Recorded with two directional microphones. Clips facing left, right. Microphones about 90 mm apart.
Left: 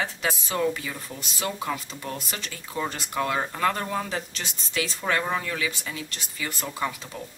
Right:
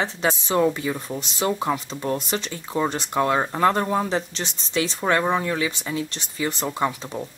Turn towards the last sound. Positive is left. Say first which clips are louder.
# right 6 dB
turn(degrees=-25)  # may be behind; listen again after turning